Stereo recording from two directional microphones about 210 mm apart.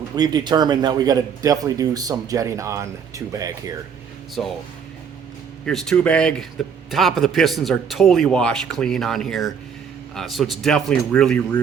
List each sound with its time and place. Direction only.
0.2 s speech: 20° right (ahead or behind)
4.4 s a man's voice: centre (ahead or behind)
5.6 s a man's voice: 5° left (ahead or behind)